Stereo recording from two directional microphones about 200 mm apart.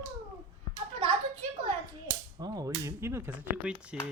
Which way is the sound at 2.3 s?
20° right (ahead or behind).